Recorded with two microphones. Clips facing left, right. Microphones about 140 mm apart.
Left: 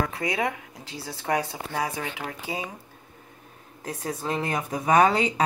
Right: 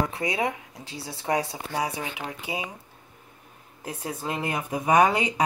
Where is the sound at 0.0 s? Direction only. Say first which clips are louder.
Even; 25° right (ahead or behind).